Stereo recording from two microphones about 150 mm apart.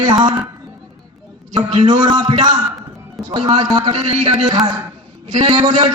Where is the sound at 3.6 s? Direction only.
20° right (ahead or behind).